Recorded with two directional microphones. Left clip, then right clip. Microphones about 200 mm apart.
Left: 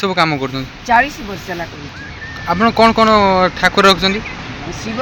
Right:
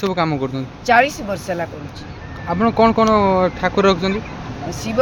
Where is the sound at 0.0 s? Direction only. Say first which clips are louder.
Left 4 dB; 5° right (ahead or behind).